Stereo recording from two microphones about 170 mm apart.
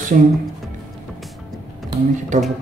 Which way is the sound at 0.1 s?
50° right (ahead or behind).